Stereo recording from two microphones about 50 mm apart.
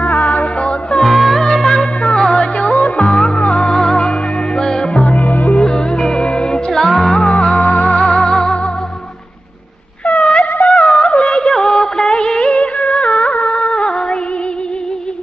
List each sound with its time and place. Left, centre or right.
0.0 s music: centre
0.6 s music: left
1.0 s music: centre
7.2 s music: centre
7.7 s music: centre
10.0 s wind instrument: centre
10.6 s music: centre
12.9 s music: centre